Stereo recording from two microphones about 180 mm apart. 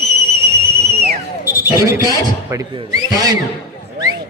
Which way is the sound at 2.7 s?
25° right (ahead or behind).